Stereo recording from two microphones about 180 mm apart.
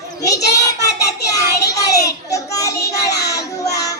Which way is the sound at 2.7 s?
65° left (ahead or behind).